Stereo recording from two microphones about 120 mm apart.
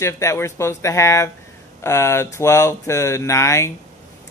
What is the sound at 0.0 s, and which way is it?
Speech, 25° left (ahead or behind).